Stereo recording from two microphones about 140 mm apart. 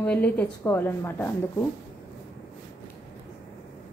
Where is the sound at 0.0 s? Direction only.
10° left (ahead or behind).